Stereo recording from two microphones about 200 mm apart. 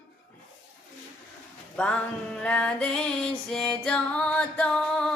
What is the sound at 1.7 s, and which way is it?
Music, 5° left (ahead or behind).